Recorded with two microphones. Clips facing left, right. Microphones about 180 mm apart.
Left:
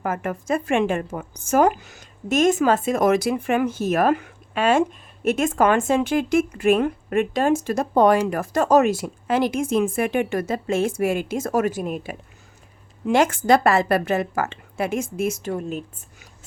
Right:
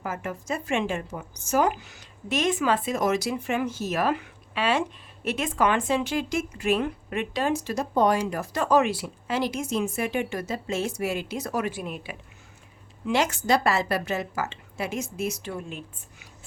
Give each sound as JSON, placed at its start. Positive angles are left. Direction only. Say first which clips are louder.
{"t": 0.0, "sound": "speech", "louder": "left 6 dB", "side_deg": 55}